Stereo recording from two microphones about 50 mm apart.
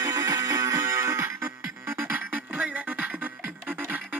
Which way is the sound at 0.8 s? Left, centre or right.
Right.